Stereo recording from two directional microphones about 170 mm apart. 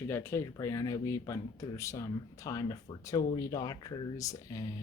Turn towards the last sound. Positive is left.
turn(degrees=20)  # may be behind; listen again after turning